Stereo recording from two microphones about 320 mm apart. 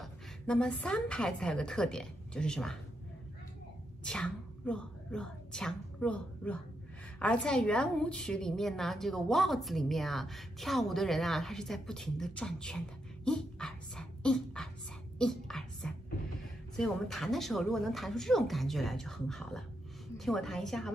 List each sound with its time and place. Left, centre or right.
0.0 s a woman's voice: centre
4.0 s a woman's voice: centre
15.1 s whispering: centre
16.7 s a woman's voice: centre